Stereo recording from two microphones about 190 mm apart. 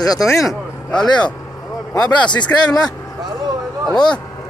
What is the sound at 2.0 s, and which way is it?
Speech, 25° left (ahead or behind).